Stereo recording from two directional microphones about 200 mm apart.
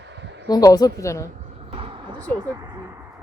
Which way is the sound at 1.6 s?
30° right (ahead or behind).